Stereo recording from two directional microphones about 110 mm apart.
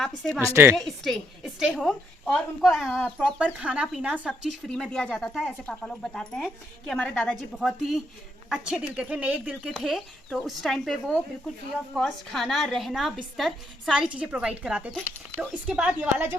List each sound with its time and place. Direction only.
0.4 s a woman's voice: 25° right (ahead or behind)
0.8 s speech: 5° left (ahead or behind)
3.2 s a woman's voice: 10° right (ahead or behind)
4.7 s a woman's voice: 5° left (ahead or behind); by 9.6 s 15° right (ahead or behind)
9.6 s a woman's voice: centre (ahead or behind); by 16.4 s 20° right (ahead or behind)